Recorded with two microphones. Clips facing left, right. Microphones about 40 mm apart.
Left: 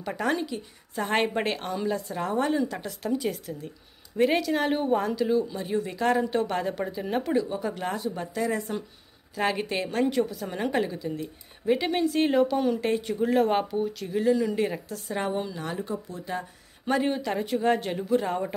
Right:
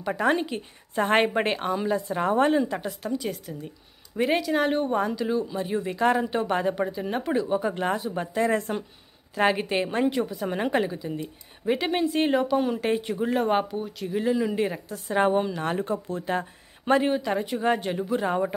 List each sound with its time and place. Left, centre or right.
0.0 s a woman's voice: centre
0.4 s a woman's voice: right
1.4 s a woman's voice: centre
2.0 s a woman's voice: right
2.6 s a woman's voice: centre
3.0 s a woman's voice: centre
7.3 s a woman's voice: centre
8.4 s a woman's voice: right
9.3 s a woman's voice: right
10.4 s a woman's voice: right
15.0 s a woman's voice: right
17.0 s a woman's voice: centre
18.2 s a woman's voice: centre